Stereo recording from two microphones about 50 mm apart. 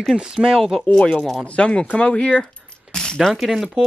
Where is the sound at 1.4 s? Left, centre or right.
Left.